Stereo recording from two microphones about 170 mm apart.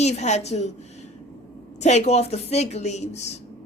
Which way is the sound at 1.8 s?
40° left (ahead or behind).